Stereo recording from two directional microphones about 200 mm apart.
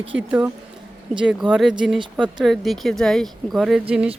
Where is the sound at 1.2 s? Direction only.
5° right (ahead or behind).